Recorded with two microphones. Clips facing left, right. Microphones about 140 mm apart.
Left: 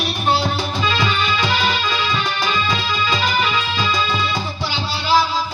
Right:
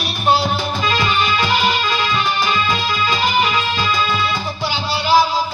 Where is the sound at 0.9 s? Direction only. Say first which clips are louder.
Right 4 dB; 15° right (ahead or behind).